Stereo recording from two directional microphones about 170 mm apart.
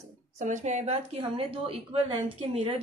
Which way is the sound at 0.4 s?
45° right (ahead or behind).